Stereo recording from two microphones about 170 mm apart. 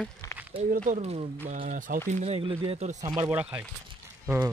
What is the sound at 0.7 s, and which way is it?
Speech, 45° right (ahead or behind).